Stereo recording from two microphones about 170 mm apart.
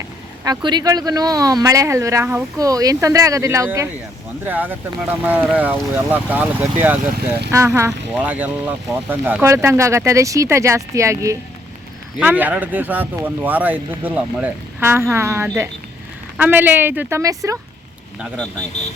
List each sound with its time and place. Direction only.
0.4 s speech: 25° right (ahead or behind)
7.2 s speech: 75° right (ahead or behind)
7.5 s speech: 15° right (ahead or behind)